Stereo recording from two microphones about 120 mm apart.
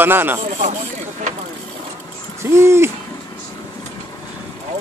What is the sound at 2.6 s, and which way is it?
Hoot, 20° right (ahead or behind).